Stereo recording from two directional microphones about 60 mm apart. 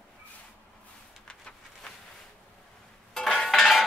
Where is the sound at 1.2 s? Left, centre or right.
Centre.